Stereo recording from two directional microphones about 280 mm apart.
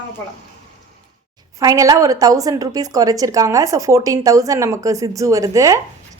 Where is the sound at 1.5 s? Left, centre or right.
Centre.